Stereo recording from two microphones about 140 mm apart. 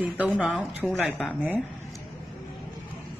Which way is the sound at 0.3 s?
Centre (ahead or behind).